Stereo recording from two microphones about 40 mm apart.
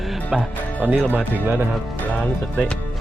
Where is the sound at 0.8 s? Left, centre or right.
Right.